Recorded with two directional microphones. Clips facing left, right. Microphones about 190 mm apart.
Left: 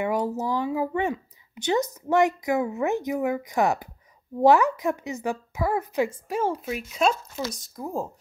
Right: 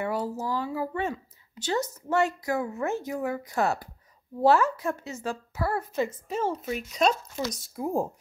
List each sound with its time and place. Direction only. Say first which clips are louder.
0.0 s speech: left 4 dB; 15° left (ahead or behind)
7.6 s speech: right 3 dB; 10° right (ahead or behind)